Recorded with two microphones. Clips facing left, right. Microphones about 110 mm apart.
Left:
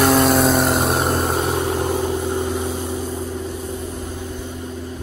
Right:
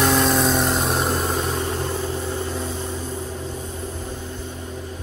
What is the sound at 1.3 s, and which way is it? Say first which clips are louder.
Vehicle: left 4 dB; 60° left (ahead or behind).